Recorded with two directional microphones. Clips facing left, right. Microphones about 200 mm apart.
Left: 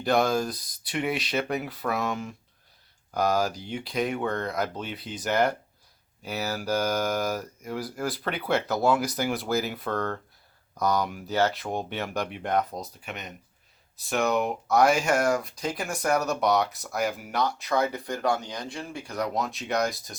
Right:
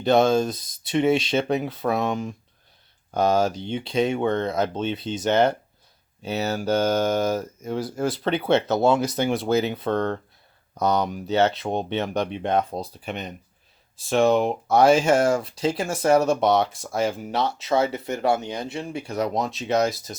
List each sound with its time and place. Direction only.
0.0 s speech: 25° right (ahead or behind)